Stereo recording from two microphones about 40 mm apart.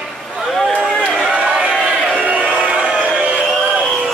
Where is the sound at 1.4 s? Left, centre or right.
Right.